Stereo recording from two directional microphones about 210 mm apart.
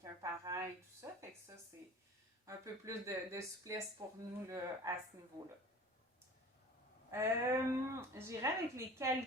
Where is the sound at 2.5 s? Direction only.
15° right (ahead or behind).